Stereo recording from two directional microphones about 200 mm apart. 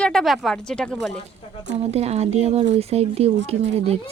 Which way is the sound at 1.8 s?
30° right (ahead or behind).